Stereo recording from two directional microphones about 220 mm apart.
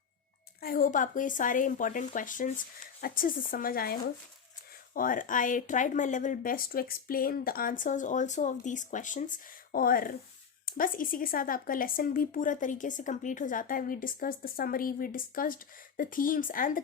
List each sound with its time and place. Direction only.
0.6 s speech: 40° left (ahead or behind)